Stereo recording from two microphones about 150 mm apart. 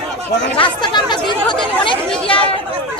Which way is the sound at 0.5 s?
35° left (ahead or behind).